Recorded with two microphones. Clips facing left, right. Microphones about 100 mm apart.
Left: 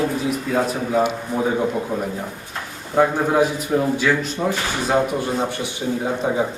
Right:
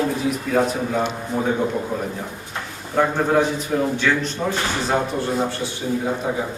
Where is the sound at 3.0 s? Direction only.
10° left (ahead or behind).